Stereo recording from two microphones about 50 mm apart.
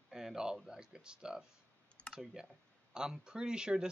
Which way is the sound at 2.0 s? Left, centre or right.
Left.